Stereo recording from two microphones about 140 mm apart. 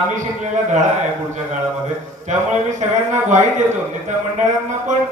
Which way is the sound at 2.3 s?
60° right (ahead or behind).